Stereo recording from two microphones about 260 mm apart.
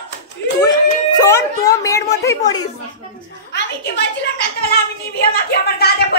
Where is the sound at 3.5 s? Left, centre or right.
Left.